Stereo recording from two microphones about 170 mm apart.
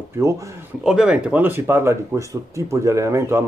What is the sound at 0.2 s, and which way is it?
Speech, 15° right (ahead or behind).